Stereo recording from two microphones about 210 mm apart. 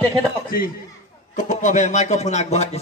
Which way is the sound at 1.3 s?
35° left (ahead or behind).